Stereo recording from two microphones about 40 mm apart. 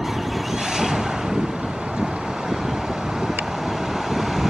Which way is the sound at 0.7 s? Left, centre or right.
Centre.